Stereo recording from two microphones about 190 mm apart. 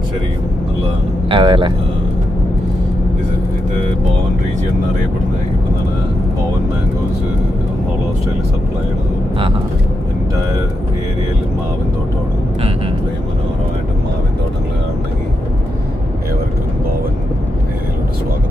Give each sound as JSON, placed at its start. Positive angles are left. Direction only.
{"t": 1.3, "sound": "speech", "side_deg": -25}